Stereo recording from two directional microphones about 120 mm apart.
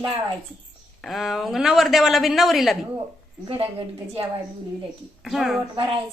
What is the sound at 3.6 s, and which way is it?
Speech, 55° right (ahead or behind).